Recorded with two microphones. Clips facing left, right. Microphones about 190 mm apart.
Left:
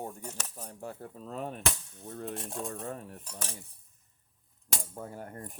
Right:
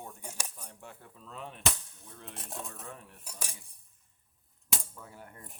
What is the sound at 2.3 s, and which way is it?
Cutlery, centre (ahead or behind).